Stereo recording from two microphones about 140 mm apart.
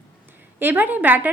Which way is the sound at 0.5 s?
15° right (ahead or behind).